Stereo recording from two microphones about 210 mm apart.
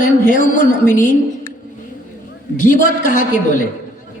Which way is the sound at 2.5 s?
40° left (ahead or behind).